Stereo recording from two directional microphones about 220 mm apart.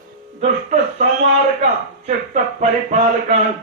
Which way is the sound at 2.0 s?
35° right (ahead or behind).